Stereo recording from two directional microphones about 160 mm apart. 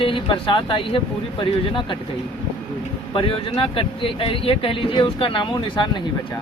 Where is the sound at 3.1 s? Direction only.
35° left (ahead or behind).